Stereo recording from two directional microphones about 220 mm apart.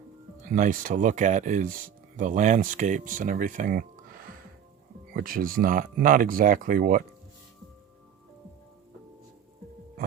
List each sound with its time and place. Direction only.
0.4 s speech: 35° right (ahead or behind)